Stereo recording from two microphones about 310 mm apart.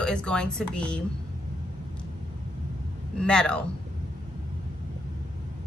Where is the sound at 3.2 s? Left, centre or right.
Centre.